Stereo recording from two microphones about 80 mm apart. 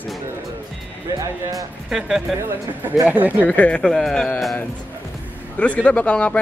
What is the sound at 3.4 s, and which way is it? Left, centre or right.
Speech, centre.